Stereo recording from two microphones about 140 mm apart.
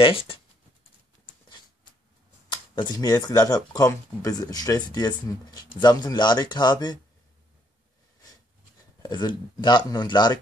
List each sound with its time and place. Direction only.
0.0 s speech: 40° left (ahead or behind)
2.5 s speech: 35° left (ahead or behind)
9.0 s speech: 30° left (ahead or behind)